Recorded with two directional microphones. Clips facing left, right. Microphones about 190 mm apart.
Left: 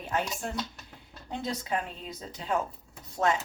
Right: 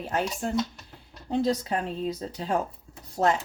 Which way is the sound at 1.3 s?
35° right (ahead or behind).